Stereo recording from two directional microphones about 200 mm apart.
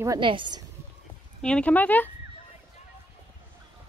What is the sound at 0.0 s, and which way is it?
Speech, 20° right (ahead or behind).